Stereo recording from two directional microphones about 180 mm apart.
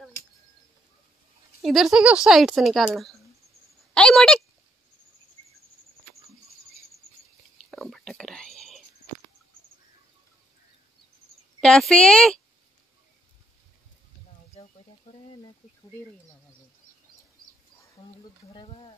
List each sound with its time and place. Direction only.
1.6 s speech: centre (ahead or behind)
3.9 s a sound: 5° left (ahead or behind)
7.7 s whispering: centre (ahead or behind)
11.6 s speech: 5° left (ahead or behind)
18.5 s speech: 30° left (ahead or behind)